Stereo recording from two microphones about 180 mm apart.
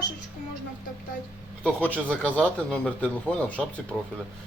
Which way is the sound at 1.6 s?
10° left (ahead or behind).